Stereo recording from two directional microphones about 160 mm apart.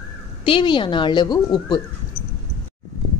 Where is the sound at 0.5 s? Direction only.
30° left (ahead or behind).